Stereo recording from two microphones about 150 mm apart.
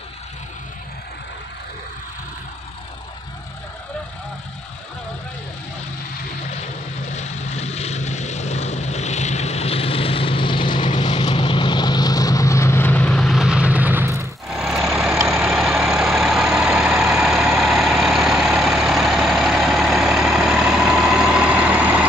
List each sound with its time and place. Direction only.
7.1 s vehicle: 50° left (ahead or behind); by 14.2 s 15° right (ahead or behind)
14.5 s vehicle: 5° right (ahead or behind)